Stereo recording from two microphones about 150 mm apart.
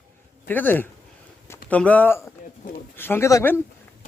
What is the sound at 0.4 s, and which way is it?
A man's voice, 10° left (ahead or behind).